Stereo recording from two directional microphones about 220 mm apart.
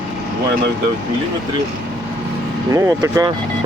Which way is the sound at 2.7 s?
15° right (ahead or behind).